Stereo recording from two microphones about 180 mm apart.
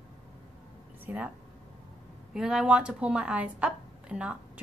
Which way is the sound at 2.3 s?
5° right (ahead or behind).